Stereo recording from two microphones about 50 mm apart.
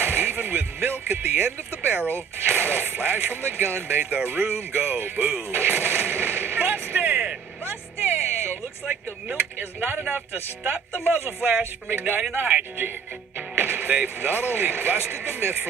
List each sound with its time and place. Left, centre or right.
0.0 s speech: right
2.0 s speech: left
2.4 s speech: right
5.5 s artillery fire: right
8.0 s a sound: right
9.6 s speech: right